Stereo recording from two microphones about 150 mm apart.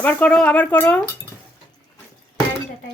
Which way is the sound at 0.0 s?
10° left (ahead or behind).